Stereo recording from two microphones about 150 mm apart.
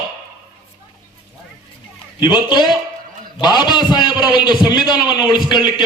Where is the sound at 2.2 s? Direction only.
30° left (ahead or behind).